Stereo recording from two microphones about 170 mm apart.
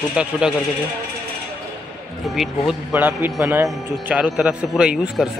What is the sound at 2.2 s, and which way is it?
A man's voice, centre (ahead or behind).